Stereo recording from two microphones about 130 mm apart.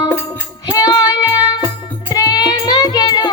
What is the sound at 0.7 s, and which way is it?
Music, 30° left (ahead or behind).